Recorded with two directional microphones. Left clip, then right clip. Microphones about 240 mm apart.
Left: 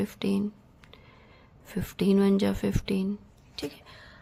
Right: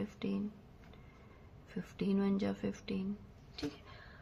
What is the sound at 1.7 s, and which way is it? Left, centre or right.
A woman's voice, left.